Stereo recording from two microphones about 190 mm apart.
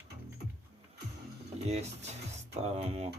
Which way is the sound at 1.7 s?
35° right (ahead or behind).